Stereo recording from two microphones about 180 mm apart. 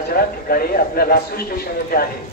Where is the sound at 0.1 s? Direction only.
55° left (ahead or behind).